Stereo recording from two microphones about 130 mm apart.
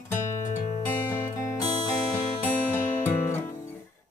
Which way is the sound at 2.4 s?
15° left (ahead or behind).